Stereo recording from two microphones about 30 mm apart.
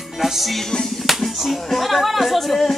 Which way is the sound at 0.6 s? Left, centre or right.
Centre.